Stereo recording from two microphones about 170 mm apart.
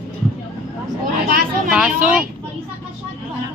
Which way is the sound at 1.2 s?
60° right (ahead or behind).